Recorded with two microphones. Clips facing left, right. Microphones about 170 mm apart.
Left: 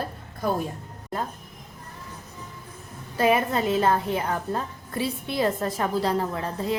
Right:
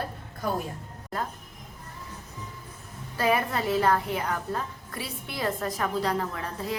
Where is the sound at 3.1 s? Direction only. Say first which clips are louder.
Left 4 dB; 20° left (ahead or behind).